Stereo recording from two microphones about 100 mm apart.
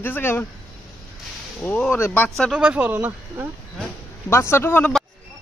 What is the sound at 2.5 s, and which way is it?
Speech, 15° right (ahead or behind).